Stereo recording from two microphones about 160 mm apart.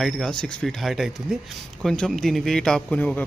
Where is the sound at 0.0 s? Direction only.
5° left (ahead or behind).